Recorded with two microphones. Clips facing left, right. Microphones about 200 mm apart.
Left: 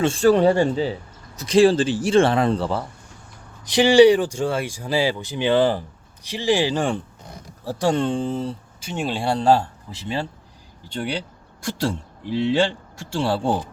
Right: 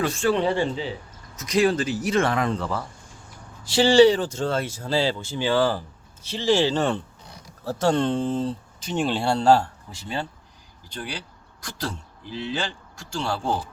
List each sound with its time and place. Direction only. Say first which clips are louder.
0.0 s speech: left 6 dB; 35° left (ahead or behind)
1.4 s speech: left 6 dB; 30° left (ahead or behind)
3.6 s speech: left 2 dB; 15° left (ahead or behind)
10.8 s speech: left 7 dB; 25° left (ahead or behind)